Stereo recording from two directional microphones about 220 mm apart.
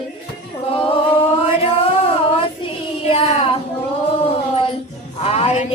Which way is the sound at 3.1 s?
25° left (ahead or behind).